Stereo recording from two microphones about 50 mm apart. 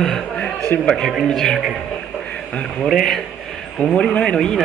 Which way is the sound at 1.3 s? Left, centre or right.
Centre.